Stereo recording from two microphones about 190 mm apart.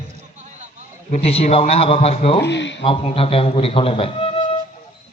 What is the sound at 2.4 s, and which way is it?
Speech, 65° left (ahead or behind).